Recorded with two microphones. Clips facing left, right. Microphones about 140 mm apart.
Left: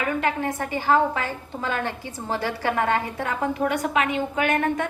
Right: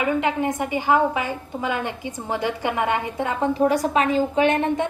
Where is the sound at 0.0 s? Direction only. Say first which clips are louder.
Right 3 dB; 20° right (ahead or behind).